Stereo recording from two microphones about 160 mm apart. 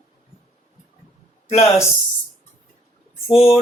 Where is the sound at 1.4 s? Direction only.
40° left (ahead or behind).